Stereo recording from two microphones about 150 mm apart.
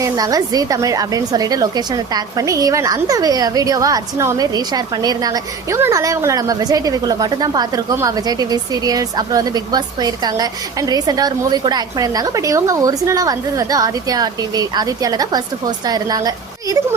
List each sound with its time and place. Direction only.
0.0 s a woman's voice: 25° right (ahead or behind)